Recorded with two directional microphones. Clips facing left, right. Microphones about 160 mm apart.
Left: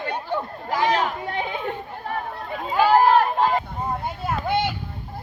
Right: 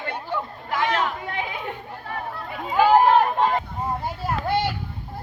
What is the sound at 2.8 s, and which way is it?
Run, 20° right (ahead or behind).